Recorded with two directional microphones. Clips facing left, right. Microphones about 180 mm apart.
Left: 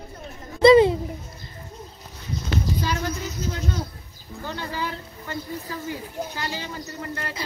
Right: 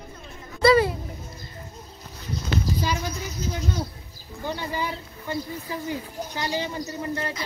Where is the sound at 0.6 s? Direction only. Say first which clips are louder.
Left 5 dB; 20° left (ahead or behind).